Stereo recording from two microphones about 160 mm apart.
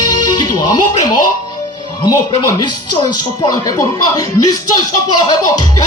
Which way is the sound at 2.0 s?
25° left (ahead or behind).